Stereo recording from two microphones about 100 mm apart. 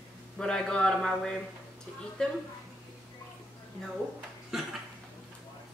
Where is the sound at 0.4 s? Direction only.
10° left (ahead or behind).